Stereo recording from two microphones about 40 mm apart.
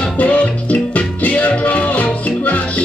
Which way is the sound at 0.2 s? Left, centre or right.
Left.